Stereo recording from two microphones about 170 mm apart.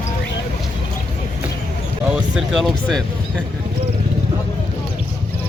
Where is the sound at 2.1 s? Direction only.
Centre (ahead or behind).